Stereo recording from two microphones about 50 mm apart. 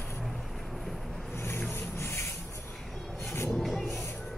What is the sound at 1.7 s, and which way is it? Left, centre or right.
Rub, left.